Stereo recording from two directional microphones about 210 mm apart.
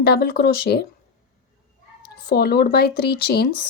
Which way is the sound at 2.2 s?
50° left (ahead or behind).